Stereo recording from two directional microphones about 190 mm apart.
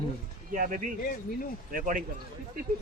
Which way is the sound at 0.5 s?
45° right (ahead or behind).